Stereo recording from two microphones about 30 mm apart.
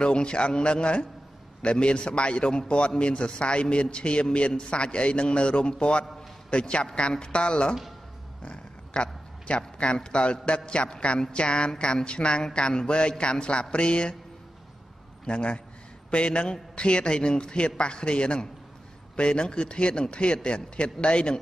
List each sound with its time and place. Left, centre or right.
0.0 s a man's voice: left
15.2 s a man's voice: left